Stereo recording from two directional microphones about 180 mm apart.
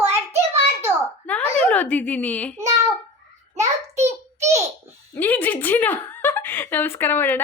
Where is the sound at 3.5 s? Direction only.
40° right (ahead or behind).